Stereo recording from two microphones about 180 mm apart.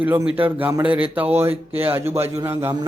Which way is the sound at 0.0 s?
10° right (ahead or behind).